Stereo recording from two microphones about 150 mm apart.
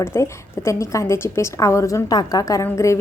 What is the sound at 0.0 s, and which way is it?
A woman's voice, 15° left (ahead or behind).